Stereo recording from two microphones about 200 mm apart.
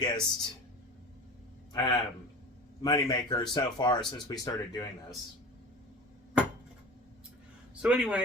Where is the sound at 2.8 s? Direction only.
20° left (ahead or behind).